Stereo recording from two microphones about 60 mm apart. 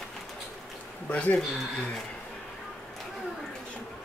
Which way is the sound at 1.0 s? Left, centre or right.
Left.